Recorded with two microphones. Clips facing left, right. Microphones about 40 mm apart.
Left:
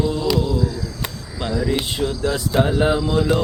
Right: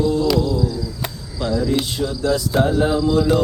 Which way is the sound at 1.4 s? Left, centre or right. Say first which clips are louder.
Right 2 dB; left.